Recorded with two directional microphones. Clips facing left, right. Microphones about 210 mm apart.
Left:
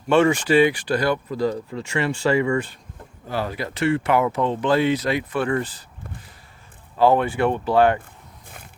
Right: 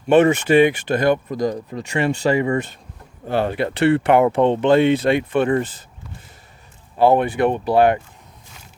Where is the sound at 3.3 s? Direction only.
65° right (ahead or behind).